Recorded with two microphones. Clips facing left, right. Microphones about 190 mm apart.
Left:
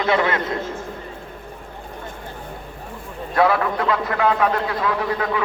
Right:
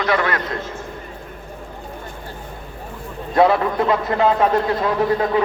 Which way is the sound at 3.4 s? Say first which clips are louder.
Right 3 dB; 25° right (ahead or behind).